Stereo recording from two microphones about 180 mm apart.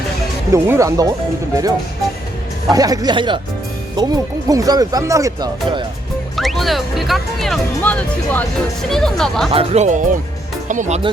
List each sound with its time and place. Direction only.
0.5 s speech: 15° right (ahead or behind)
2.6 s speech: 20° right (ahead or behind)
6.3 s speech: centre (ahead or behind)
9.5 s speech: 35° right (ahead or behind)